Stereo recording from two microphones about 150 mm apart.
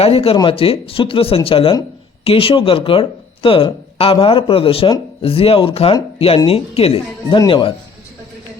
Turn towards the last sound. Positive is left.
turn(degrees=35)  # may be behind; listen again after turning